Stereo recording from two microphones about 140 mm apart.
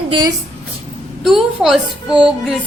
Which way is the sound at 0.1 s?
30° right (ahead or behind).